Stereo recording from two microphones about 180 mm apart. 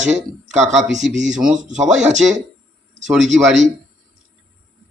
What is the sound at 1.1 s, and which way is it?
Speech, 40° right (ahead or behind).